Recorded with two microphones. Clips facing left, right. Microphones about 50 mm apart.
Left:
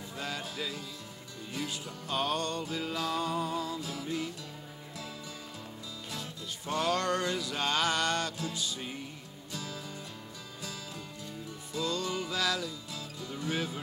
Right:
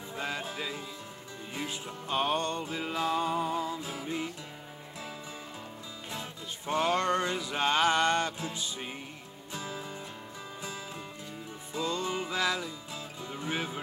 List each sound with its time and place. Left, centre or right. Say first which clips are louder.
0.2 s music: right 2 dB; right
6.1 s music: right 2 dB; right
11.7 s music: right 1 dB; right